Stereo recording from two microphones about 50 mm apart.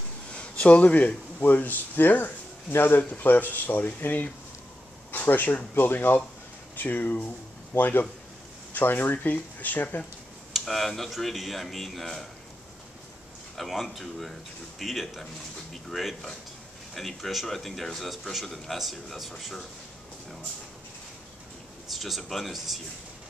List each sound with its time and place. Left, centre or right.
0.3 s speech: left
3.0 s speech: left
10.5 s a man's voice: centre
13.6 s a man's voice: centre
21.9 s a man's voice: centre